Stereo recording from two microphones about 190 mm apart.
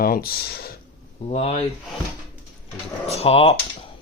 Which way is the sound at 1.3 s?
35° left (ahead or behind).